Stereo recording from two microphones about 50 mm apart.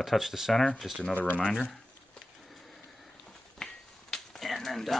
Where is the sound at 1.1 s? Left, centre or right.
Left.